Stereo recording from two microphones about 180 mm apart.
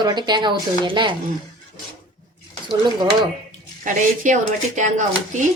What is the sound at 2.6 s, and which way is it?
Speech, 25° right (ahead or behind).